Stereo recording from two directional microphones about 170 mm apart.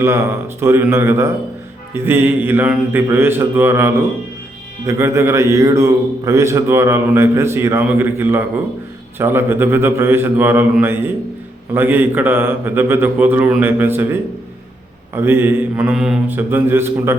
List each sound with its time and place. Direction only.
0.6 s a man's voice: 15° right (ahead or behind)